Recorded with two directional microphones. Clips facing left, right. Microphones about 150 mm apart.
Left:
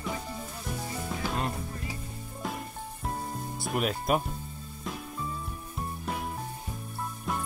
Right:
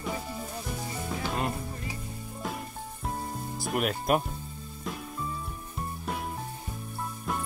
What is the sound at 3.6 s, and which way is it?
Speech, centre (ahead or behind).